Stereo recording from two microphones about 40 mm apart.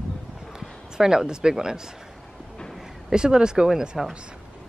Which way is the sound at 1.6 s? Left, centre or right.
Centre.